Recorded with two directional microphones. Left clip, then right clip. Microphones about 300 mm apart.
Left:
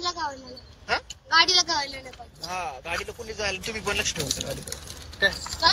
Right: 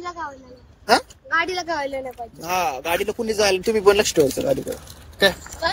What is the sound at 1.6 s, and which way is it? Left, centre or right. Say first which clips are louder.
Speech: right 1 dB; centre.